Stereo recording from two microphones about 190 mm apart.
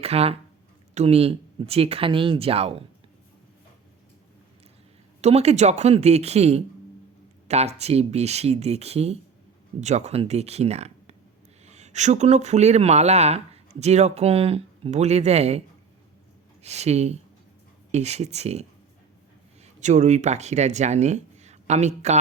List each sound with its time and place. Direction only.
0.0 s speech: 30° right (ahead or behind)
5.2 s speech: 35° right (ahead or behind)
16.6 s speech: 35° right (ahead or behind)
19.8 s speech: 40° right (ahead or behind)